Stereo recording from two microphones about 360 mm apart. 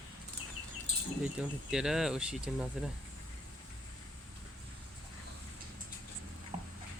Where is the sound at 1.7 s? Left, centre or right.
Centre.